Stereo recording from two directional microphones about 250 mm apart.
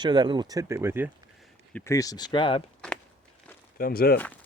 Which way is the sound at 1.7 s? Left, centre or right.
Centre.